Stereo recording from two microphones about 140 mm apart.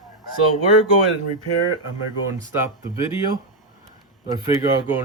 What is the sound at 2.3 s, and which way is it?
Speech, 20° right (ahead or behind).